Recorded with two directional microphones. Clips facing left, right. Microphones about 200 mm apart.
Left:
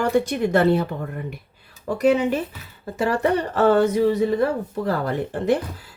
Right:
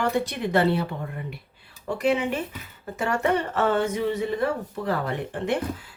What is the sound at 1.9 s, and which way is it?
Speech, 40° left (ahead or behind).